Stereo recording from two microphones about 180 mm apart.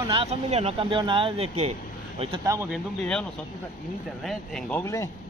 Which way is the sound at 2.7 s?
5° left (ahead or behind).